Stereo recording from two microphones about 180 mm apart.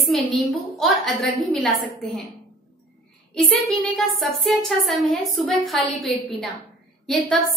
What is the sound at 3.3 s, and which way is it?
A woman's voice, centre (ahead or behind).